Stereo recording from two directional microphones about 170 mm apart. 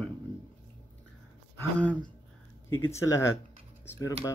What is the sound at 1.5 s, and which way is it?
A man's voice, 10° left (ahead or behind).